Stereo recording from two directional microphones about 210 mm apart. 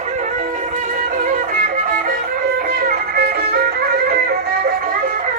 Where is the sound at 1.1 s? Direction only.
40° right (ahead or behind).